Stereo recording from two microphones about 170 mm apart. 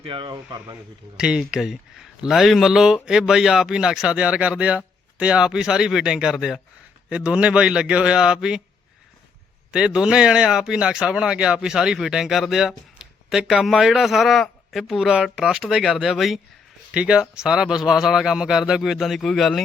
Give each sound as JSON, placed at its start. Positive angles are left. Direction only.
{"t": 0.1, "sound": "speech", "side_deg": -25}
{"t": 1.1, "sound": "speech", "side_deg": -5}
{"t": 9.7, "sound": "speech", "side_deg": -5}